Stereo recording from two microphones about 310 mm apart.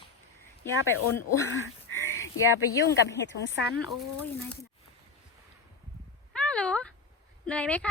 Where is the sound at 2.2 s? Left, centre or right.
Left.